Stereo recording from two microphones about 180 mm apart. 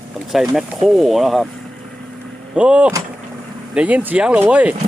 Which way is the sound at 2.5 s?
5° right (ahead or behind).